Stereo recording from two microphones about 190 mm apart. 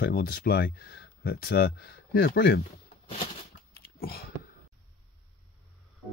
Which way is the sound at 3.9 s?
55° left (ahead or behind).